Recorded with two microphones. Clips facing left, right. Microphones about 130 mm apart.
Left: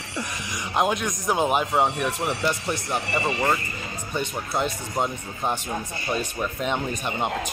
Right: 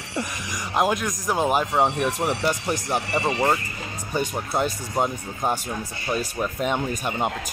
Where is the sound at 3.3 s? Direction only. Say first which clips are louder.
Right 2 dB; 20° right (ahead or behind).